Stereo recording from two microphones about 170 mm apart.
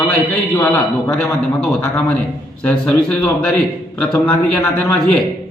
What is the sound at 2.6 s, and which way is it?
A man's voice, 5° left (ahead or behind).